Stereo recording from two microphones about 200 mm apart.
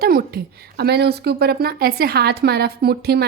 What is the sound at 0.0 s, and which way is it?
A woman's voice, 50° right (ahead or behind).